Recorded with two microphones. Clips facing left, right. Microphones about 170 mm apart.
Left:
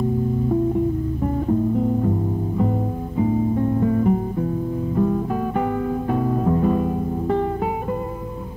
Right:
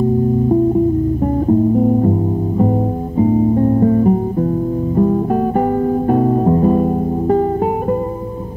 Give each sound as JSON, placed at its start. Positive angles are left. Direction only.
{"t": 1.2, "sound": "music", "side_deg": -40}